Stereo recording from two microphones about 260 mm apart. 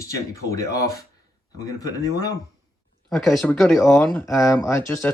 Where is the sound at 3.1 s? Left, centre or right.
Centre.